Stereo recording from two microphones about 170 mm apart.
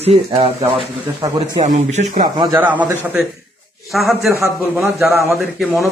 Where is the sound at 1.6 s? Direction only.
40° right (ahead or behind).